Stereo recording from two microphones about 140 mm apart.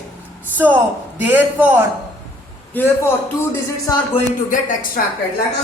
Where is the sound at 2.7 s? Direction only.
15° left (ahead or behind).